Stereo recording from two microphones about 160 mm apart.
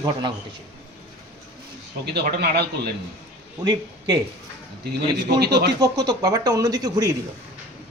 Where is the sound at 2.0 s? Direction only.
90° right.